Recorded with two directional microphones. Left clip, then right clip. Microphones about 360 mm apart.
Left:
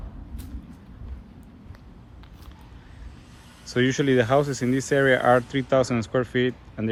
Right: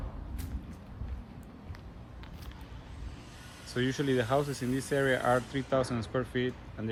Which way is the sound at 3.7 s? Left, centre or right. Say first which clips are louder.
Left 9 dB; centre.